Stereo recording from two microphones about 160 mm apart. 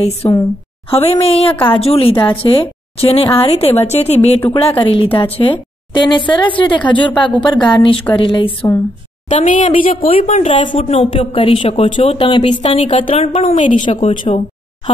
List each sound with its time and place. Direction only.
0.0 s a woman's voice: 35° left (ahead or behind)
9.3 s a woman's voice: 50° left (ahead or behind)
13.6 s speech: 35° left (ahead or behind)